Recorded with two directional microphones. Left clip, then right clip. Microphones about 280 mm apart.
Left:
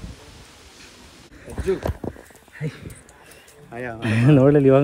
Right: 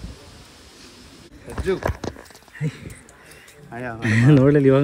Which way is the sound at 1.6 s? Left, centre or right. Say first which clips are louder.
Right 1 dB; centre.